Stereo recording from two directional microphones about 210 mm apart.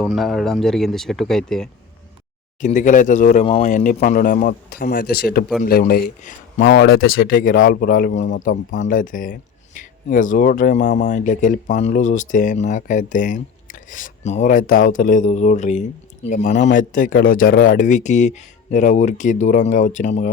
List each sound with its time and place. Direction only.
0.0 s speech: centre (ahead or behind)
2.6 s speech: 35° left (ahead or behind)